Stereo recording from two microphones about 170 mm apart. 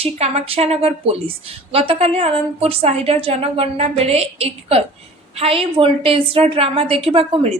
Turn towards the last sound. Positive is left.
turn(degrees=-35)  # may be behind; listen again after turning